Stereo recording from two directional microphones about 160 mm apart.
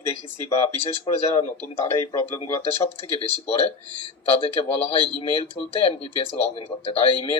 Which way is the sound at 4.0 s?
35° left (ahead or behind).